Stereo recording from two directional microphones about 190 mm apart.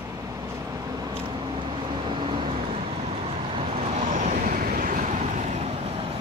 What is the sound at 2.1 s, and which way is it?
Vehicle, 30° right (ahead or behind).